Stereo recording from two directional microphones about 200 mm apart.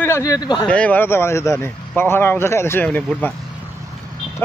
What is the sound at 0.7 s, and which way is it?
Speech, 5° left (ahead or behind).